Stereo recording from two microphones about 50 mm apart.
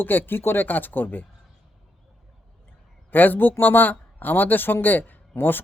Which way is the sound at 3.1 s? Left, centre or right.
Left.